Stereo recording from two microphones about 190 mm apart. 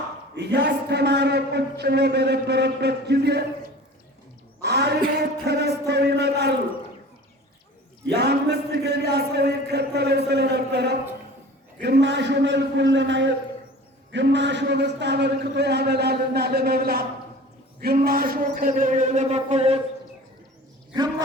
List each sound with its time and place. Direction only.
0.3 s a man's voice: 65° right (ahead or behind)
4.6 s a sound: 60° right (ahead or behind)
5.5 s a man's voice: 60° right (ahead or behind)
8.0 s a man's voice: 60° right (ahead or behind); by 19.8 s 35° right (ahead or behind)